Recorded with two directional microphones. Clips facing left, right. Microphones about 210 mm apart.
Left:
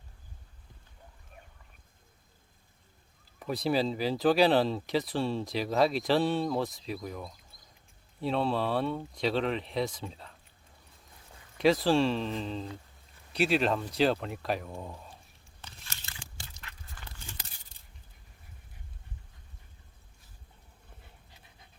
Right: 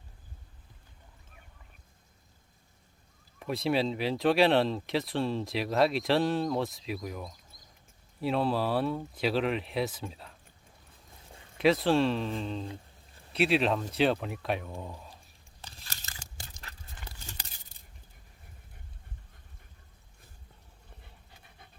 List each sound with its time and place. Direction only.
3.4 s speech: centre (ahead or behind)
11.5 s speech: centre (ahead or behind)
15.6 s crunch: 35° right (ahead or behind)